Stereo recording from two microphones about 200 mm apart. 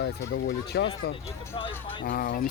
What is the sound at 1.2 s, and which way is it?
Speech, 15° left (ahead or behind).